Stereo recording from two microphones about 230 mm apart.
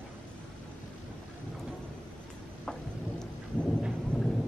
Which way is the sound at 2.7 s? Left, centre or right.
Centre.